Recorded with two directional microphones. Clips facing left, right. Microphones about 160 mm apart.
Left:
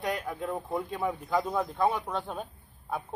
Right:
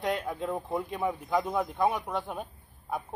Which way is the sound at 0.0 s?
25° right (ahead or behind).